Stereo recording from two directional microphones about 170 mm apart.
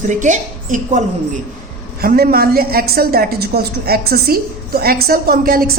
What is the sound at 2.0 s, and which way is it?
A woman's voice, 60° right (ahead or behind).